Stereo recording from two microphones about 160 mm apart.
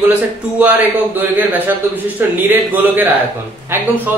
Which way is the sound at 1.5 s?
10° right (ahead or behind).